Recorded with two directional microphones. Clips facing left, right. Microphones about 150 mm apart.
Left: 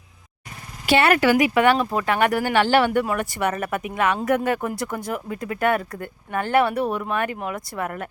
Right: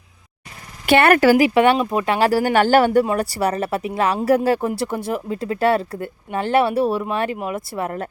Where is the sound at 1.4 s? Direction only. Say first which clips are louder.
Right 3 dB; 25° right (ahead or behind).